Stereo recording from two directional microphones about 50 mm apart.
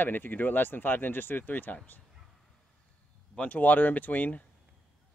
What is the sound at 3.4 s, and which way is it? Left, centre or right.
Speech, left.